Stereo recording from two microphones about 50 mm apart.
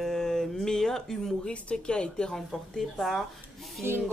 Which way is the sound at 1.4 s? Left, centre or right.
Left.